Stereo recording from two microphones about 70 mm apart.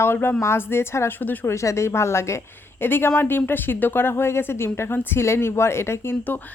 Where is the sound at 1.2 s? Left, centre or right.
Left.